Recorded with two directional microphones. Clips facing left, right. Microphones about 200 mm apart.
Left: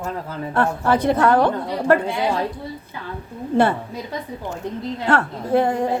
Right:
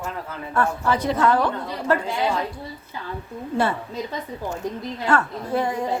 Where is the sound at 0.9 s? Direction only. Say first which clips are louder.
Left 4 dB; 55° left (ahead or behind).